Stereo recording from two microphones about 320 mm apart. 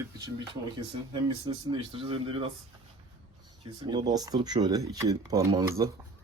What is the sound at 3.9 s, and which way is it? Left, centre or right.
Speech, centre.